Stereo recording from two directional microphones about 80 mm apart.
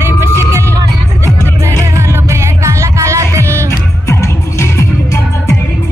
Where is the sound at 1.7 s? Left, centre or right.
Right.